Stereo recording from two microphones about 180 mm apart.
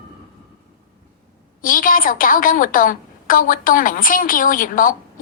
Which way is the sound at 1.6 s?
50° left (ahead or behind).